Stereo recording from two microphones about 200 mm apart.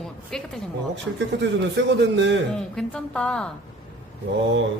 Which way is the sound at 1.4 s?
60° right (ahead or behind).